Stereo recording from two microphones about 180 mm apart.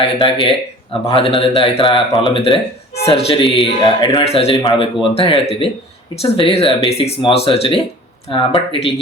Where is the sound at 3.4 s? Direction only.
Centre (ahead or behind).